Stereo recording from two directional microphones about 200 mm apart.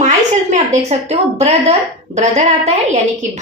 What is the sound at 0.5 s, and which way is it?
A woman's voice, 35° right (ahead or behind).